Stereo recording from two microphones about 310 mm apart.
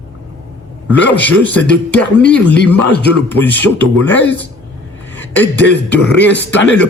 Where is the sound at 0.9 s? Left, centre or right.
Centre.